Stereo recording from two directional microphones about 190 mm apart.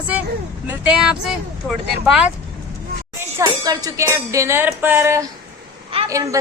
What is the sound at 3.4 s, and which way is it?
Music, 20° right (ahead or behind).